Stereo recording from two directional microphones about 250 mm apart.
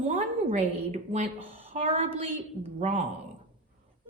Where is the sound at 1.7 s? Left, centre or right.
Right.